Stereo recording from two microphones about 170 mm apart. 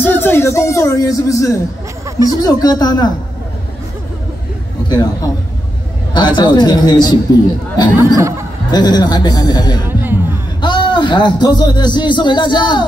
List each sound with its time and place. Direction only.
0.0 s speech: 15° left (ahead or behind)
2.0 s music: 20° right (ahead or behind)
2.4 s a man's voice: 20° left (ahead or behind)
4.8 s a man's voice: 25° left (ahead or behind)
8.2 s speech: 15° right (ahead or behind)
8.7 s a man's voice: 25° left (ahead or behind)
9.8 s music: 10° right (ahead or behind)
10.6 s a man's voice: 30° left (ahead or behind)